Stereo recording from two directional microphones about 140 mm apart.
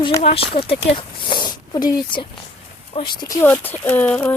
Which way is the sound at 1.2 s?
35° left (ahead or behind).